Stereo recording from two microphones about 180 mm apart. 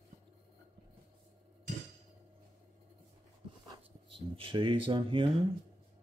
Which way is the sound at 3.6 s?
25° right (ahead or behind).